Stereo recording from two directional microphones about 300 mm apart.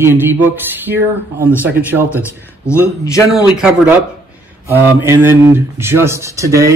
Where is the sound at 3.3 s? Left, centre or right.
Centre.